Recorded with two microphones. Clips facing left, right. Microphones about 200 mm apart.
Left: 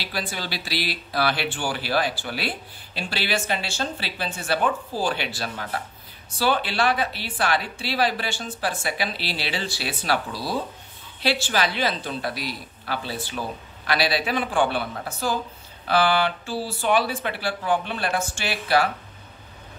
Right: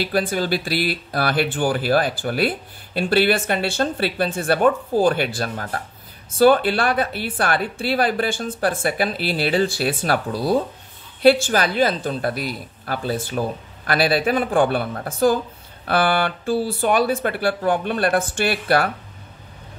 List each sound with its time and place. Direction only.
0.0 s speech: 50° right (ahead or behind)